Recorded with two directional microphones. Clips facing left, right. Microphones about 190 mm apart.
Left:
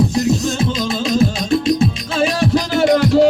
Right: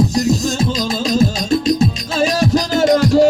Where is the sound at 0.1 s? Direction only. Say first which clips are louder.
Even; 40° right (ahead or behind).